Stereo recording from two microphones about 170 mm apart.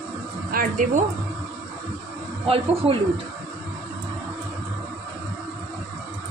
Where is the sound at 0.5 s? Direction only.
50° right (ahead or behind).